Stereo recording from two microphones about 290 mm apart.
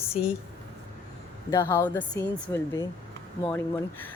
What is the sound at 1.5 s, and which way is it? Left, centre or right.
Speech, centre.